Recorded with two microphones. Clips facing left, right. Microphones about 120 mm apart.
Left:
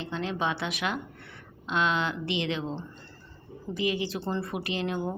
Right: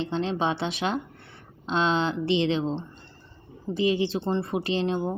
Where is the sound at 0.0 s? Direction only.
30° right (ahead or behind).